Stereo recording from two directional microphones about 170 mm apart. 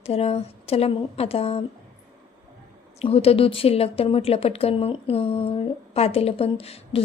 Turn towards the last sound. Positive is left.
turn(degrees=35)  # may be behind; listen again after turning